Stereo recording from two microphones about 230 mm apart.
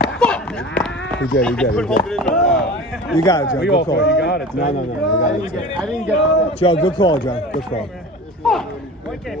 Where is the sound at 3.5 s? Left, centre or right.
Left.